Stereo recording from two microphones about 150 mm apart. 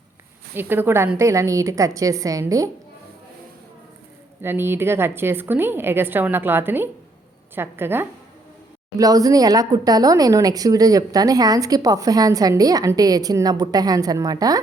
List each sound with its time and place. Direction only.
0.5 s a woman's voice: 15° right (ahead or behind)
4.4 s a woman's voice: 15° right (ahead or behind)